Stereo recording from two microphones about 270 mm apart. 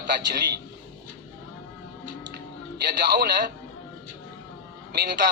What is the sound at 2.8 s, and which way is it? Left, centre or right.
Speech, right.